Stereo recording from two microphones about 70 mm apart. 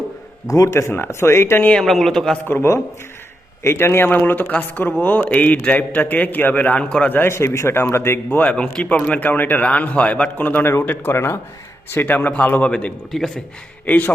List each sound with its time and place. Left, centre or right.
0.4 s speech: left
0.7 s a man's voice: left
1.7 s speech: centre
2.5 s a man's voice: left; by 7.1 s centre
7.1 s a man's voice: left
8.3 s a man's voice: left
13.1 s a man's voice: centre
13.8 s speech: left